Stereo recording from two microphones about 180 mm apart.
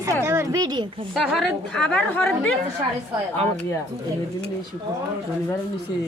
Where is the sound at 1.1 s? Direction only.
Centre (ahead or behind).